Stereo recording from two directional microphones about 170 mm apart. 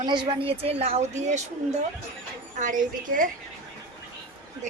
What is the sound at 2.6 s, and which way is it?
Speech, 50° right (ahead or behind).